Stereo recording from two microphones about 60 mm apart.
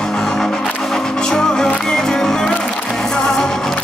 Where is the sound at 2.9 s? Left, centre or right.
Centre.